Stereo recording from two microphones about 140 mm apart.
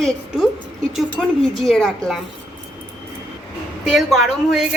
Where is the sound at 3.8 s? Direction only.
Centre (ahead or behind).